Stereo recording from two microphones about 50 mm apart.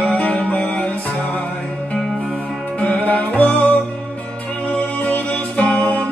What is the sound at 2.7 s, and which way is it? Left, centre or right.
Music, left.